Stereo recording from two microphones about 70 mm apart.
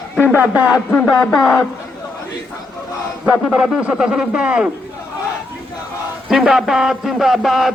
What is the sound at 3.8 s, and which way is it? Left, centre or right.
Speech, centre.